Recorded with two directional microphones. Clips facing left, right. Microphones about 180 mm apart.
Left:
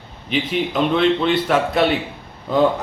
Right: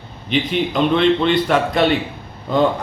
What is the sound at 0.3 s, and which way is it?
A man's voice, 5° left (ahead or behind).